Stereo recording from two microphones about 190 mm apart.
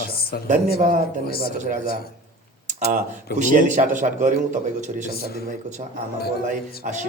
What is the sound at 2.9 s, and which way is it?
A man's voice, 40° right (ahead or behind).